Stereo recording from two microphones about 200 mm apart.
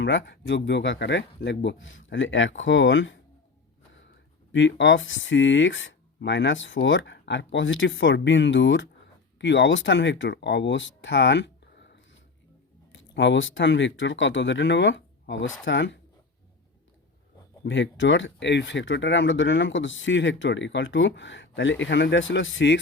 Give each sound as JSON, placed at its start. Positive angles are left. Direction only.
{"t": 0.0, "sound": "speech", "side_deg": 65}
{"t": 4.5, "sound": "speech", "side_deg": 65}
{"t": 17.7, "sound": "speech", "side_deg": 65}